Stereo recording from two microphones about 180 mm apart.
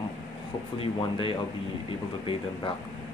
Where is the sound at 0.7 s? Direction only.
30° left (ahead or behind).